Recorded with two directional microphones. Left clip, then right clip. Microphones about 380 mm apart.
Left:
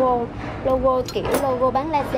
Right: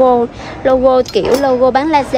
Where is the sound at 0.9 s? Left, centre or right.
Right.